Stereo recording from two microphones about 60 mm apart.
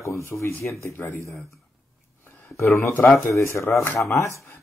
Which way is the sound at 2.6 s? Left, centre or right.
Left.